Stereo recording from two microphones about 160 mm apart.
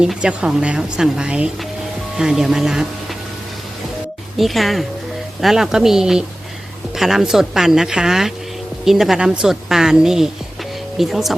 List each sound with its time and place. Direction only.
0.0 s a woman's voice: 5° right (ahead or behind)
4.4 s a woman's voice: centre (ahead or behind)